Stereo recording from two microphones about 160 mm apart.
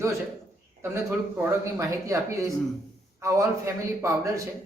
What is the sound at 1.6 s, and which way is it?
A man's voice, 20° right (ahead or behind).